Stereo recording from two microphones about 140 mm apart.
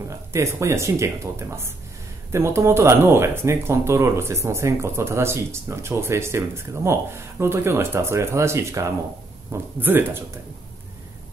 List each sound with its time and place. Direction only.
0.1 s a man's voice: 20° right (ahead or behind)